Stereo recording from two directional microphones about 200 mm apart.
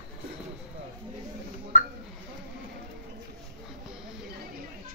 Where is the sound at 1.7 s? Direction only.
35° left (ahead or behind).